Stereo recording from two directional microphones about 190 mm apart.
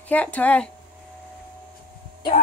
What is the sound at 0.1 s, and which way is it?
Speech, 10° left (ahead or behind).